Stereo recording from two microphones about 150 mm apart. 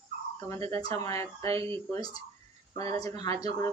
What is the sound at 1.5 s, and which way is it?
Speech, 35° right (ahead or behind).